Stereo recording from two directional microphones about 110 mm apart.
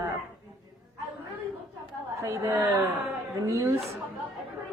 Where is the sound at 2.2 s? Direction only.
25° right (ahead or behind).